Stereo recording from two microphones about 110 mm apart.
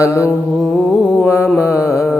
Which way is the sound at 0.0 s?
25° left (ahead or behind).